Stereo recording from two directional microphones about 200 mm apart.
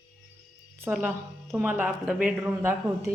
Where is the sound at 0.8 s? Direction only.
5° right (ahead or behind).